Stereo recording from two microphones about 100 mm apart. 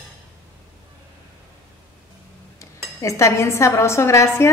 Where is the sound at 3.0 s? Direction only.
30° left (ahead or behind).